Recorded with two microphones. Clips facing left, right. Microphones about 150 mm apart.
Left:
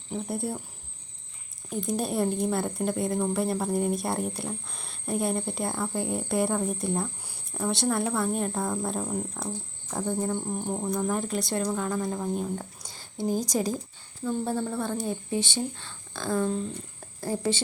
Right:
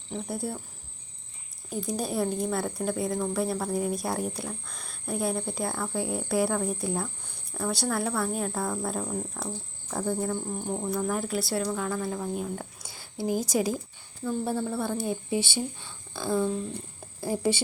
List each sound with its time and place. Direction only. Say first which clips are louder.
0.3 s a woman's voice: left 1 dB; centre (ahead or behind)
1.7 s a woman's voice: left 2 dB; centre (ahead or behind)
10.3 s speech: left 2 dB; 20° left (ahead or behind)
10.7 s speech: even; 10° left (ahead or behind)
11.1 s a woman's voice: even; 5° right (ahead or behind)
11.7 s speech: left 1 dB; 5° left (ahead or behind)
12.4 s a woman's voice: left 2 dB; 5° right (ahead or behind)